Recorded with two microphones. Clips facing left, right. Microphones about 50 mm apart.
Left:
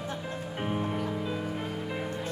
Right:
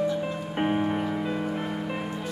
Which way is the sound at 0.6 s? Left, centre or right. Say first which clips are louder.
Right 7 dB; right.